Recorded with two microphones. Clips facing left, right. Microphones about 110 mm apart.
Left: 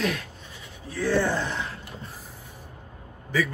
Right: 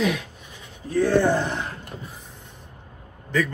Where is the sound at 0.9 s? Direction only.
50° right (ahead or behind).